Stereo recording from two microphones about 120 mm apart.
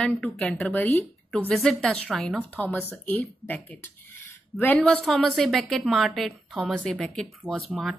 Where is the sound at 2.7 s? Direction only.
15° left (ahead or behind).